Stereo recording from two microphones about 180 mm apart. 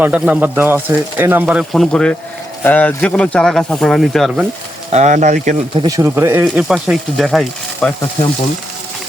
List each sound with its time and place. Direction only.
0.0 s speech: 10° right (ahead or behind)
4.9 s speech: 40° right (ahead or behind)
5.7 s speech: 25° right (ahead or behind)
6.0 s speech: 15° right (ahead or behind)